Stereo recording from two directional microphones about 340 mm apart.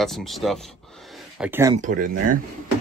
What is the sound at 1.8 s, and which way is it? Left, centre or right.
Speech, right.